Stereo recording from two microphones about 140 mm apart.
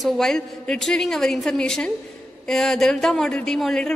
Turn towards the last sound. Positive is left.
turn(degrees=5)  # may be behind; listen again after turning